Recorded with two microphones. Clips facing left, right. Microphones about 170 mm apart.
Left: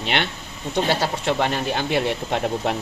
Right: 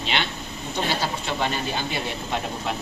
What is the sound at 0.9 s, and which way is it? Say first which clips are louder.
Speech: left 5 dB; 70° left (ahead or behind).